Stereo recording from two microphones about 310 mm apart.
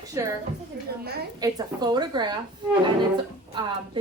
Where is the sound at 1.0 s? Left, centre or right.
Right.